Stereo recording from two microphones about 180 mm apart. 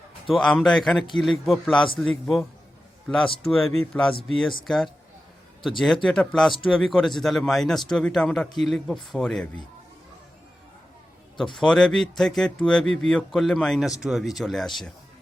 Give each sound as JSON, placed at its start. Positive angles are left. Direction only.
{"t": 0.3, "sound": "speech", "side_deg": 0}
{"t": 11.5, "sound": "speech", "side_deg": 0}